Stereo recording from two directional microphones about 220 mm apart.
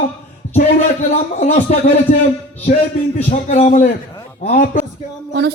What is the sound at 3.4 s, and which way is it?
Speech, 35° left (ahead or behind).